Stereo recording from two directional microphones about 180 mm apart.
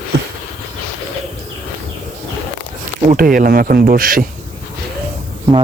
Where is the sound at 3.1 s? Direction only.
50° right (ahead or behind).